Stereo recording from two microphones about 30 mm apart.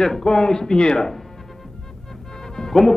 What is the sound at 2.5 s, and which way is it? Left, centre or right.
Music, centre.